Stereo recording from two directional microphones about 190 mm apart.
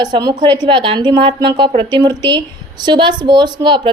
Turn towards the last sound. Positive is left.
turn(degrees=-25)  # may be behind; listen again after turning